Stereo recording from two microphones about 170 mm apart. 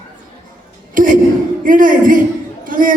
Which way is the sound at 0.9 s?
50° right (ahead or behind).